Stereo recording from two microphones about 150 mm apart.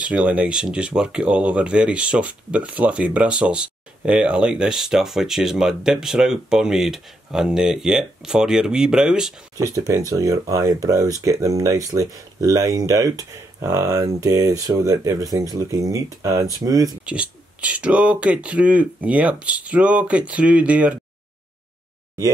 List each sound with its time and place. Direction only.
0.0 s speech: 10° right (ahead or behind)
9.6 s speech: 20° right (ahead or behind)
17.0 s speech: 5° right (ahead or behind)